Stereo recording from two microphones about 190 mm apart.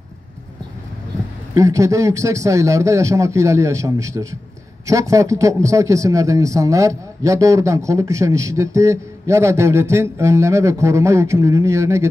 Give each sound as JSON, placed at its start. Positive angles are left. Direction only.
{"t": 1.5, "sound": "a man's voice", "side_deg": -15}